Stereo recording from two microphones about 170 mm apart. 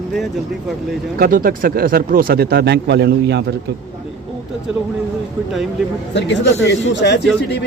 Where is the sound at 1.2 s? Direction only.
60° right (ahead or behind); by 3.4 s 85° right.